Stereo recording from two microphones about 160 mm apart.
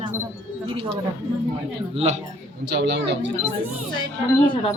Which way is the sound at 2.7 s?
90° right.